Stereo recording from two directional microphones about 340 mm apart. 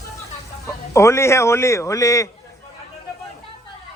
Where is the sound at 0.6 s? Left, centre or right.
Centre.